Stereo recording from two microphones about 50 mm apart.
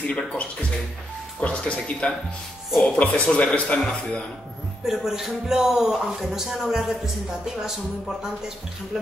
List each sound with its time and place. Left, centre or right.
0.0 s speech: left
4.8 s speech: centre
8.9 s speech: centre